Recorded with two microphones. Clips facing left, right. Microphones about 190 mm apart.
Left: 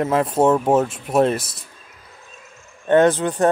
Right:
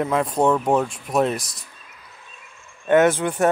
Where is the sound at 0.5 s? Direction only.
25° left (ahead or behind).